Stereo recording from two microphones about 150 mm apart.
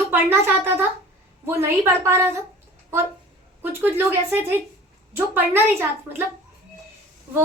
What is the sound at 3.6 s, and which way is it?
A woman's voice, 15° right (ahead or behind).